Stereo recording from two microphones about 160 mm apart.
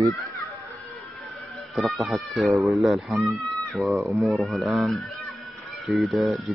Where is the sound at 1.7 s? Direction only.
Centre (ahead or behind).